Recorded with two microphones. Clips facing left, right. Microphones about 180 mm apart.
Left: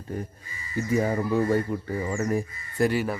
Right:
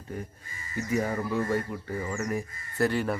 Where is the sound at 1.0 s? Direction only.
35° left (ahead or behind).